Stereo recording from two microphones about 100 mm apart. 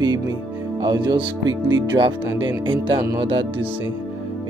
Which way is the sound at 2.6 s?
55° right (ahead or behind).